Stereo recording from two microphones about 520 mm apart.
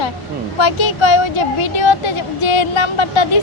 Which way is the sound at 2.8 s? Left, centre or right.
Left.